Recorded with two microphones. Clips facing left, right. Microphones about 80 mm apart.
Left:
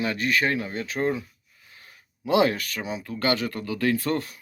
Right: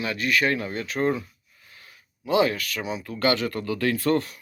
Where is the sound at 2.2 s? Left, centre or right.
Left.